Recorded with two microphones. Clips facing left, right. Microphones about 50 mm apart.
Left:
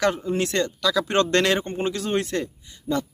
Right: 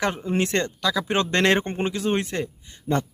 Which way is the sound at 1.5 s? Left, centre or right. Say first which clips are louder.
Right 2 dB; right.